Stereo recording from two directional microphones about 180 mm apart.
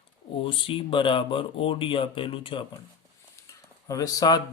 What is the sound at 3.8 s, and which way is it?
Speech, 20° left (ahead or behind).